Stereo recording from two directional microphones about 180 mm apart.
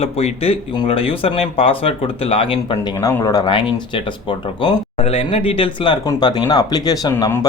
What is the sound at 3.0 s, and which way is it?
Speech, 20° left (ahead or behind).